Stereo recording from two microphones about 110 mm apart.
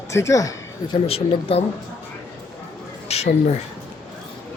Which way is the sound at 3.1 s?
75° left (ahead or behind).